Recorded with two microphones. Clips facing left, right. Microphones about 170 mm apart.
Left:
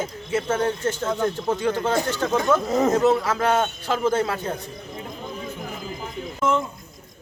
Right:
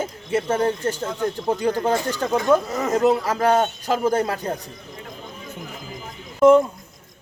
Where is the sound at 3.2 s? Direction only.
35° right (ahead or behind).